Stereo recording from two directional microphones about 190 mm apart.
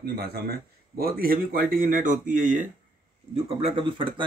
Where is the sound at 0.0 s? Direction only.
55° right (ahead or behind); by 2.6 s 40° right (ahead or behind).